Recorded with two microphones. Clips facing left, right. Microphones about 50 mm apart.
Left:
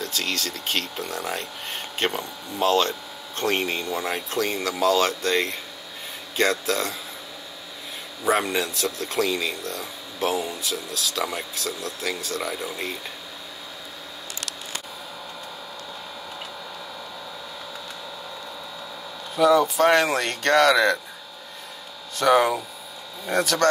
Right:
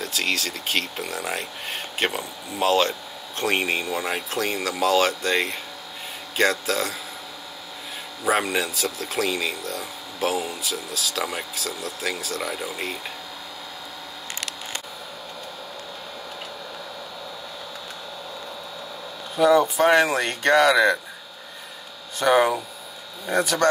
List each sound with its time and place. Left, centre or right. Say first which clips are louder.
0.0 s speech: right 2 dB; centre
8.3 s speech: even; centre
19.3 s speech: even; right
22.2 s speech: even; centre